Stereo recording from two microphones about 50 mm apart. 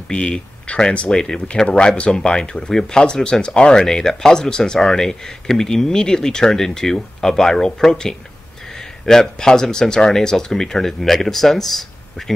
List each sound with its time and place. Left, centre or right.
0.1 s speech: centre